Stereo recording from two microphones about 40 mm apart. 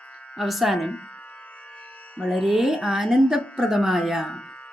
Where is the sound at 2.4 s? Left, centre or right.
Centre.